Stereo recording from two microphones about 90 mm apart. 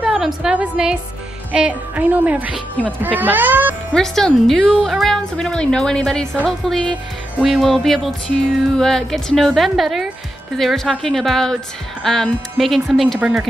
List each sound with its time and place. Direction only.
0.0 s a sound: 10° right (ahead or behind)
0.4 s music: 10° right (ahead or behind)
2.8 s speech: 20° right (ahead or behind)
3.9 s speech: 5° left (ahead or behind)